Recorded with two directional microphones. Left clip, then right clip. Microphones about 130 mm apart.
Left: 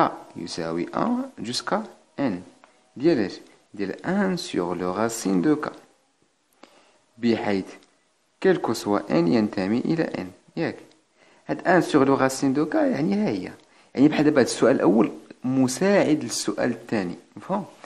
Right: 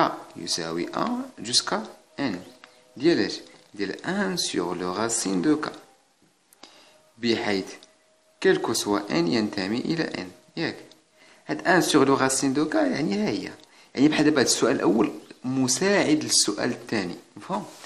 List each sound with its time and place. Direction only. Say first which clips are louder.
0.0 s speech: left 1 dB; 40° left (ahead or behind)
7.2 s speech: left 1 dB; 35° left (ahead or behind)